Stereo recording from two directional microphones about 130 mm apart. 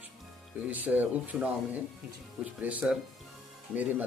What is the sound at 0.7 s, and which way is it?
Speech, 15° right (ahead or behind).